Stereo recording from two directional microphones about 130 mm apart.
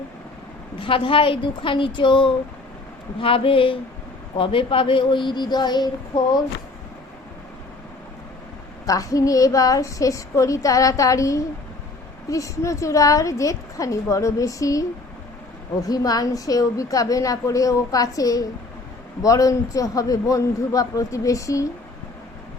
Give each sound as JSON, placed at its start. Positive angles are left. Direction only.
{"t": 0.8, "sound": "speech", "side_deg": 40}
{"t": 8.9, "sound": "a woman's voice", "side_deg": 25}
{"t": 15.9, "sound": "a woman's voice", "side_deg": 30}